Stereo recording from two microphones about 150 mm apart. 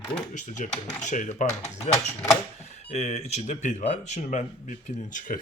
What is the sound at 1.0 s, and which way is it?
Speech, 55° left (ahead or behind).